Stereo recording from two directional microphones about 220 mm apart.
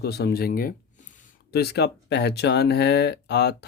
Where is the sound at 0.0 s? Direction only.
45° left (ahead or behind).